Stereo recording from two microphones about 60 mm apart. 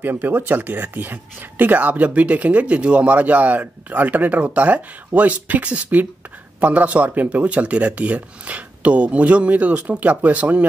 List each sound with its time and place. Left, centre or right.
0.0 s speech: right